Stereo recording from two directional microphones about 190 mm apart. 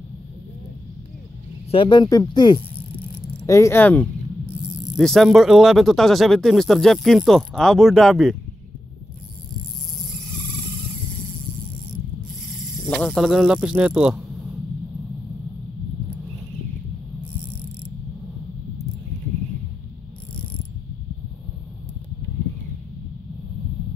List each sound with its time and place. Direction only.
1.7 s speech: 25° left (ahead or behind); by 8.4 s centre (ahead or behind)
12.9 s speech: centre (ahead or behind)